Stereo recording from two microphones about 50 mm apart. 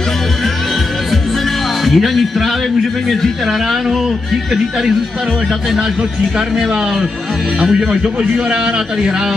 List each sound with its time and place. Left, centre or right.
1.9 s speech: centre
7.6 s a man's voice: centre